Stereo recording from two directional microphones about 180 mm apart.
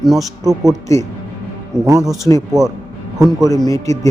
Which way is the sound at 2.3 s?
15° left (ahead or behind).